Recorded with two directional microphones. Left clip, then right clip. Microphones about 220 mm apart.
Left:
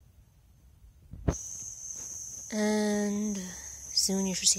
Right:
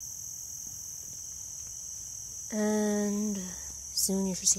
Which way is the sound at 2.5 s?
15° left (ahead or behind).